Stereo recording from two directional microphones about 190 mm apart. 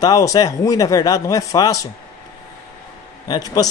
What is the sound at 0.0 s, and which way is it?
A man's voice, 20° left (ahead or behind).